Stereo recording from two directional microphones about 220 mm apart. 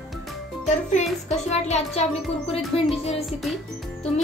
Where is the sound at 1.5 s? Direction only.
30° left (ahead or behind).